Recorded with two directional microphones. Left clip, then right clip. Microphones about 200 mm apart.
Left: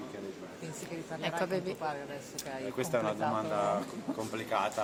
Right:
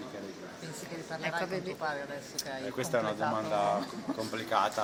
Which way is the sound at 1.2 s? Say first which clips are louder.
Left 1 dB; 20° left (ahead or behind).